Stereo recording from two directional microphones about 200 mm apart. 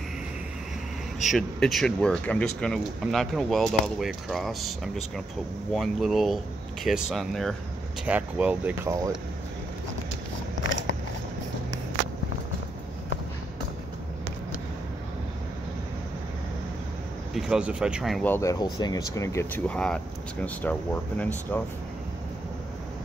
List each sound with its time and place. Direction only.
1.3 s speech: centre (ahead or behind)
17.3 s speech: 5° right (ahead or behind)
18.3 s speech: 15° left (ahead or behind)